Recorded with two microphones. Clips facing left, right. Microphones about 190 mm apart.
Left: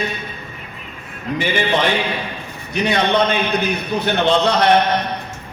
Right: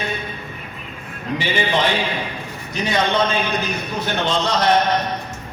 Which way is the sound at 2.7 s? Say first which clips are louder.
Left 3 dB; 60° left (ahead or behind).